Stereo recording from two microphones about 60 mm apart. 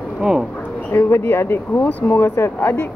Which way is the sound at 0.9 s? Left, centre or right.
Left.